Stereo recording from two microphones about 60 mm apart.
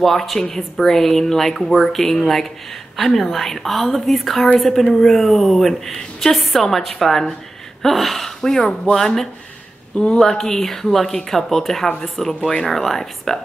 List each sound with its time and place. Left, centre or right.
0.0 s speech: centre
9.9 s speech: centre